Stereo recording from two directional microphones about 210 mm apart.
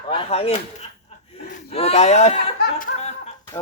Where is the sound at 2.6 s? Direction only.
45° left (ahead or behind).